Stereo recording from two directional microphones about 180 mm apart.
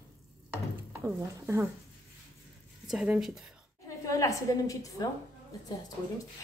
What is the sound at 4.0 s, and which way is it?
A woman's voice, 15° left (ahead or behind).